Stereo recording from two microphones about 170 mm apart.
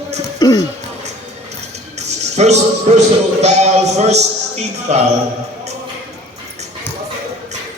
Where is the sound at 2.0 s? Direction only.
40° right (ahead or behind).